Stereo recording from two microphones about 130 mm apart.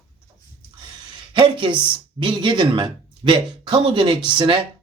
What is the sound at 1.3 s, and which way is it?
Speech, 40° right (ahead or behind).